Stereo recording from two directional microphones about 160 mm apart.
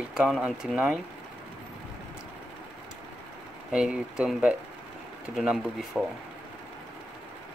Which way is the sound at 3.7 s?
5° right (ahead or behind).